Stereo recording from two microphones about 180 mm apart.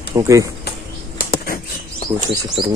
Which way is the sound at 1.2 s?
55° left (ahead or behind).